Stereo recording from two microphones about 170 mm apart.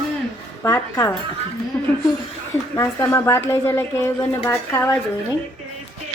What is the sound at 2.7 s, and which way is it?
A woman's voice, 15° left (ahead or behind).